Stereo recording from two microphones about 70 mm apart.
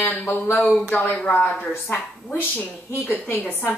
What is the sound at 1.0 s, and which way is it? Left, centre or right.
Speech, centre.